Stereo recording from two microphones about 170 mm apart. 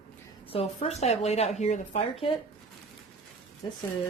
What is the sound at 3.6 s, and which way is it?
Speech, 25° left (ahead or behind).